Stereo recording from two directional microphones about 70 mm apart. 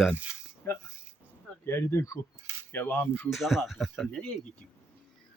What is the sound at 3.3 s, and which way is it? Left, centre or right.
Speech, centre.